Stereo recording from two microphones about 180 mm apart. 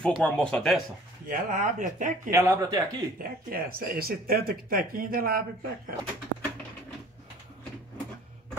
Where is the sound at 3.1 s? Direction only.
55° right (ahead or behind).